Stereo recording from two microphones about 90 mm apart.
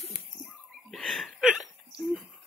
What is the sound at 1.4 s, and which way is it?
Hiccup, 10° right (ahead or behind).